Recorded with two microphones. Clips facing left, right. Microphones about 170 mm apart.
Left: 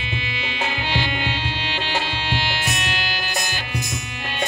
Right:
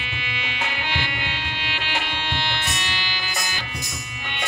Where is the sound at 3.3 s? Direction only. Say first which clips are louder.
Left 3 dB; 70° left (ahead or behind); by 4.3 s 90° left.